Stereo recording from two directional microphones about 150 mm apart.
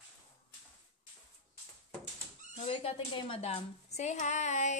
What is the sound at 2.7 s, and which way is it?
A woman's voice, 40° left (ahead or behind).